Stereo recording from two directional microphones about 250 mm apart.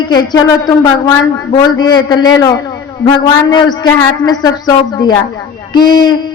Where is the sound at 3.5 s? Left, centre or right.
Centre.